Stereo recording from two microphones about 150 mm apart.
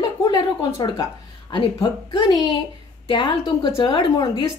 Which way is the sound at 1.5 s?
30° left (ahead or behind).